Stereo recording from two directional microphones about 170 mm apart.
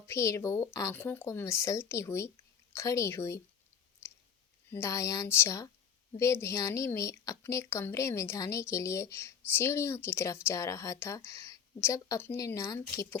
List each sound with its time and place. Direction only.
0.1 s a woman's voice: 15° left (ahead or behind)
4.7 s a woman's voice: 15° left (ahead or behind)